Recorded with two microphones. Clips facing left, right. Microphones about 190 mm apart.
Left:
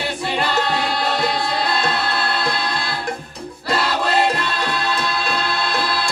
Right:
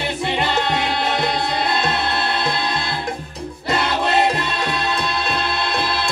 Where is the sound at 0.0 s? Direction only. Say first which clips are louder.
Right 1 dB; 20° right (ahead or behind).